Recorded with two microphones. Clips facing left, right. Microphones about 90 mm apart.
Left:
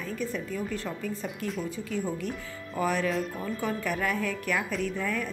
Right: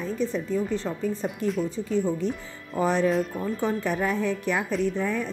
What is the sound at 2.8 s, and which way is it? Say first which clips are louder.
Speech: right 5 dB; 30° right (ahead or behind).